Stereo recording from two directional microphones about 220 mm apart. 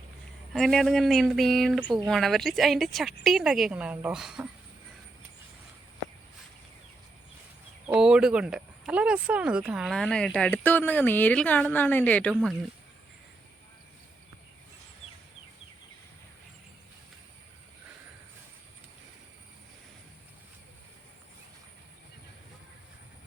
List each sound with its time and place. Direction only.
0.5 s speech: centre (ahead or behind)
7.9 s speech: 5° right (ahead or behind)